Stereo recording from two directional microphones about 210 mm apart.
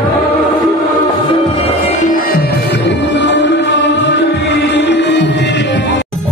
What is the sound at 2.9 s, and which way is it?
Music, 55° left (ahead or behind).